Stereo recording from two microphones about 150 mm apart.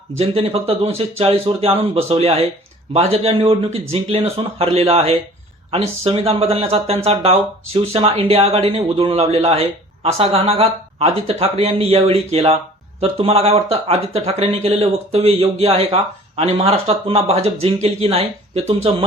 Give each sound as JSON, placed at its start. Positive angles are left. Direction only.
{"t": 0.2, "sound": "speech", "side_deg": -40}